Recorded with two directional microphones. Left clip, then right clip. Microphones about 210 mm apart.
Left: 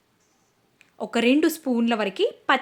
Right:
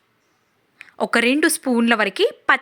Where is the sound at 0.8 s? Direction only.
10° right (ahead or behind).